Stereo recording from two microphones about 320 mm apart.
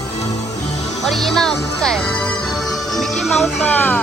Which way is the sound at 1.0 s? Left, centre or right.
Centre.